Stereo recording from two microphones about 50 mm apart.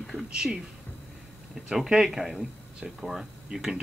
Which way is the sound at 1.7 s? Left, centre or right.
Centre.